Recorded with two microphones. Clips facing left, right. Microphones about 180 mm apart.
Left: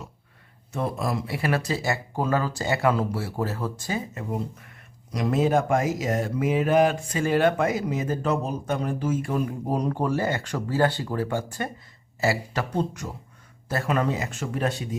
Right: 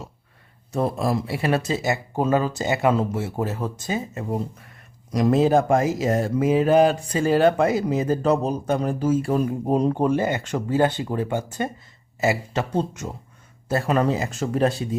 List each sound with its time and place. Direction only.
0.7 s speech: 35° right (ahead or behind)
5.1 s speech: 40° right (ahead or behind)